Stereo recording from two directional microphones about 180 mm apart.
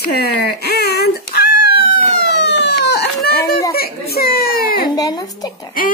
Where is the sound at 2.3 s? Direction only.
75° left (ahead or behind).